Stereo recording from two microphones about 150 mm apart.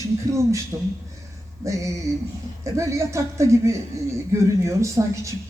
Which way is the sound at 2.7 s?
20° right (ahead or behind).